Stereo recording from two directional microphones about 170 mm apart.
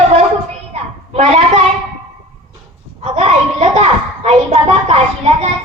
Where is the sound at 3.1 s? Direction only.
40° right (ahead or behind).